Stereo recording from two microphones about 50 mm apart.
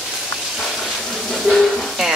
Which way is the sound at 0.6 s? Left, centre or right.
Centre.